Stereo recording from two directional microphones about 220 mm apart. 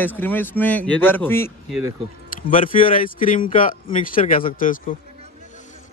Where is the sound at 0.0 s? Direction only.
10° left (ahead or behind).